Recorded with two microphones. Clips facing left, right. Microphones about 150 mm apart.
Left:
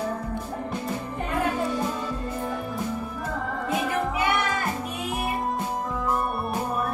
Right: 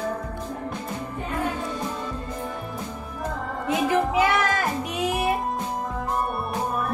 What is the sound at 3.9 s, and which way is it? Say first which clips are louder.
Music: right 7 dB; 90° right.